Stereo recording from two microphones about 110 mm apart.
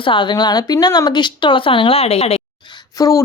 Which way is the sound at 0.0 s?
50° left (ahead or behind).